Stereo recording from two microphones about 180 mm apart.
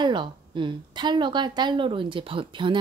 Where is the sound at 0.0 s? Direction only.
25° right (ahead or behind).